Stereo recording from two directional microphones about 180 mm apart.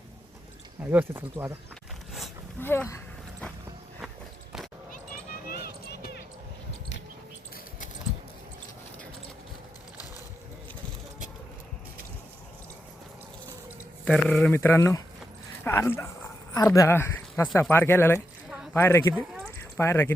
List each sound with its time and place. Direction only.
0.8 s speech: 10° right (ahead or behind)
2.6 s speech: 10° left (ahead or behind)
5.5 s basketball bounce: 55° left (ahead or behind)
14.0 s speech: 5° left (ahead or behind)
19.1 s a sound: 5° right (ahead or behind)
19.7 s speech: 15° left (ahead or behind)